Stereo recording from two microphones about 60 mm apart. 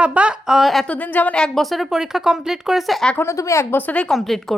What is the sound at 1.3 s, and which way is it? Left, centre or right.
Speech, centre.